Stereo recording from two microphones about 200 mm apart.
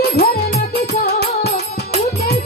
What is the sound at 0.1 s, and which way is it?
Music, 50° left (ahead or behind).